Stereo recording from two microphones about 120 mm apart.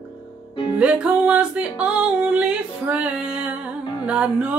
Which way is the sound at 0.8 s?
10° right (ahead or behind).